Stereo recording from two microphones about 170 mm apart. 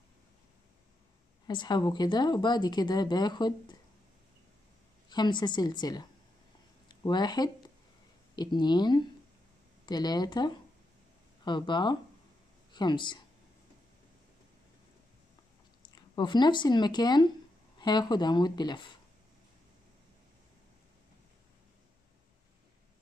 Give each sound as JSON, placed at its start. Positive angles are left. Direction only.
{"t": 1.5, "sound": "speech", "side_deg": 25}
{"t": 5.1, "sound": "speech", "side_deg": 25}
{"t": 15.8, "sound": "speech", "side_deg": 25}